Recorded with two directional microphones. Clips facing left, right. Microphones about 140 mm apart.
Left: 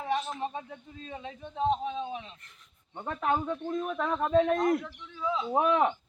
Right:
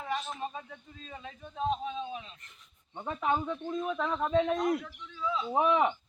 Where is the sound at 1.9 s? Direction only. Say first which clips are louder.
Left 2 dB; 65° left (ahead or behind).